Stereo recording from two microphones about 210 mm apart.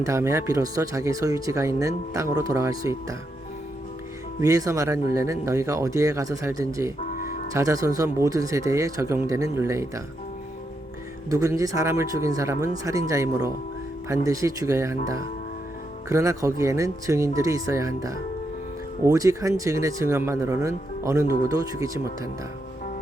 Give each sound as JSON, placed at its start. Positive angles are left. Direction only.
{"t": 0.0, "sound": "speech", "side_deg": -15}
{"t": 4.4, "sound": "speech", "side_deg": -15}
{"t": 11.3, "sound": "speech", "side_deg": -15}